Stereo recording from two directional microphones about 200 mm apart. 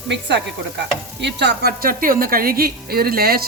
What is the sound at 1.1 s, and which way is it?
A woman's voice, 60° right (ahead or behind).